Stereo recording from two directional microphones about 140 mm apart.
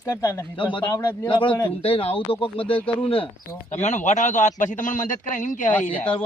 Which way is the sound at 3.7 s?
55° left (ahead or behind).